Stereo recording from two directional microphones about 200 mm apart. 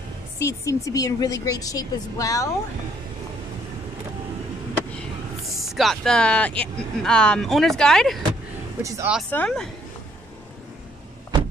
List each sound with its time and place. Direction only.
0.4 s a woman's voice: 15° left (ahead or behind)
5.6 s speech: centre (ahead or behind)
8.8 s speech: 15° right (ahead or behind)
9.3 s speech: 5° left (ahead or behind)